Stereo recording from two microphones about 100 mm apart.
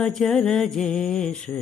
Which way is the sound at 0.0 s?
5° left (ahead or behind).